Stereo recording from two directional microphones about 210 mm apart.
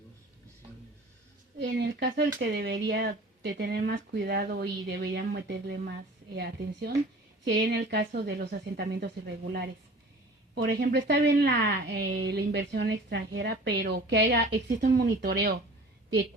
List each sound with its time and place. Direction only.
1.5 s a woman's voice: 55° right (ahead or behind)